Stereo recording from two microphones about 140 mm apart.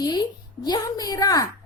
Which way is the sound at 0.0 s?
30° left (ahead or behind).